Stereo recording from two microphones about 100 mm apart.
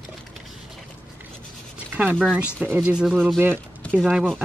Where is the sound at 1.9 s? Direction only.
15° right (ahead or behind).